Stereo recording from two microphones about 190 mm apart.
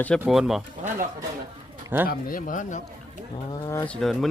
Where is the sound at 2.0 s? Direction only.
45° left (ahead or behind).